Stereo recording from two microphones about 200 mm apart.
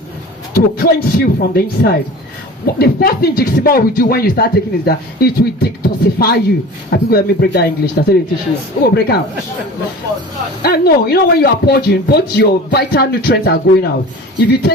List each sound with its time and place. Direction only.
0.5 s speech: 50° left (ahead or behind)
10.6 s speech: 50° left (ahead or behind)